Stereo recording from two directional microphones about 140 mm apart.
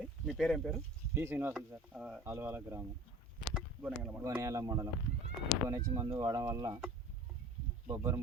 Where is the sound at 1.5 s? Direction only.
5° right (ahead or behind).